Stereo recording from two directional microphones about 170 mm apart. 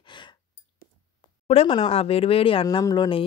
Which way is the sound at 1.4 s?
35° left (ahead or behind).